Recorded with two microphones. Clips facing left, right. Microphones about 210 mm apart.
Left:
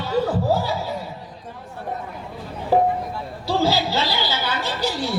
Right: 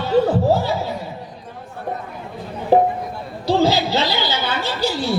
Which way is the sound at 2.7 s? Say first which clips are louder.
Right 4 dB; 20° right (ahead or behind).